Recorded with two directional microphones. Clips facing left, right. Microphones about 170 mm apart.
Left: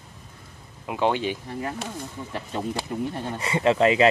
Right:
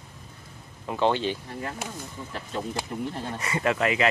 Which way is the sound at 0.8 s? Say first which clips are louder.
Even; 10° left (ahead or behind).